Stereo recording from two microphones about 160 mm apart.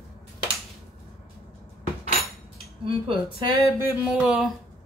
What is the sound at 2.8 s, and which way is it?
Speech, 35° right (ahead or behind).